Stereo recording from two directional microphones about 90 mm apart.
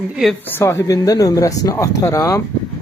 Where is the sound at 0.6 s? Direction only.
35° left (ahead or behind).